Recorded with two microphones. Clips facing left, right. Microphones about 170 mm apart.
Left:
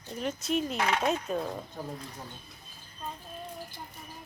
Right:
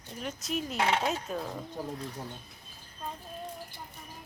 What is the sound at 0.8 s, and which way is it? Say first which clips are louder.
Speech: right 1 dB; 25° right (ahead or behind).